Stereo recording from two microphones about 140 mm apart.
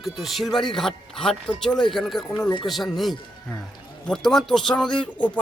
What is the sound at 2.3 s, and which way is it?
Speech, 25° left (ahead or behind).